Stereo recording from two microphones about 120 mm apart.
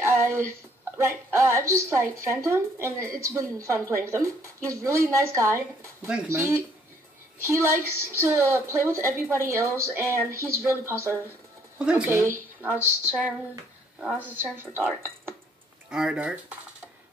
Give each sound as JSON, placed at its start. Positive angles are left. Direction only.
{"t": 0.0, "sound": "a sound", "side_deg": -20}
{"t": 0.9, "sound": "a woman's voice", "side_deg": -25}
{"t": 11.8, "sound": "speech", "side_deg": -10}
{"t": 12.1, "sound": "a woman's voice", "side_deg": -20}
{"t": 13.9, "sound": "speech", "side_deg": -10}
{"t": 15.9, "sound": "speech", "side_deg": -5}